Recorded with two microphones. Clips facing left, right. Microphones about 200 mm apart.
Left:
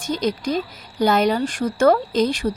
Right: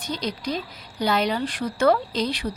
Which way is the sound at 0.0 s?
45° left (ahead or behind).